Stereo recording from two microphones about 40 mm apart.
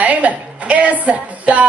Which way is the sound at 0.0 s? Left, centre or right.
Right.